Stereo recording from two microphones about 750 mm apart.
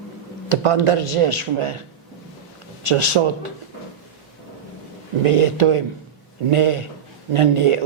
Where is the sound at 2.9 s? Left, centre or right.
Right.